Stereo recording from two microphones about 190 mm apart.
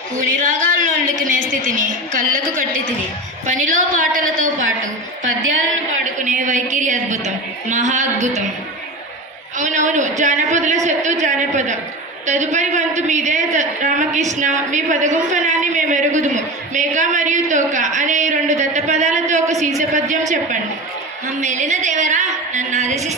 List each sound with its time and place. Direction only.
0.2 s a woman's voice: 40° right (ahead or behind)
6.2 s a man's voice: 40° right (ahead or behind)
9.6 s a man's voice: 40° right (ahead or behind)